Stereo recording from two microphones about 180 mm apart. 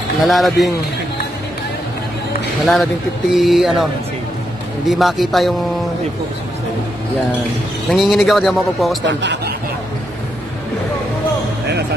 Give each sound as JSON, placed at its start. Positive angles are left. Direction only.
{"t": 0.2, "sound": "speech", "side_deg": 0}
{"t": 2.6, "sound": "speech", "side_deg": 0}
{"t": 4.8, "sound": "speech", "side_deg": 0}
{"t": 7.9, "sound": "speech", "side_deg": 0}
{"t": 9.0, "sound": "speech", "side_deg": -75}